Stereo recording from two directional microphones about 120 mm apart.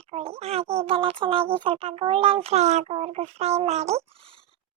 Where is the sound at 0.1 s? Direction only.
55° right (ahead or behind).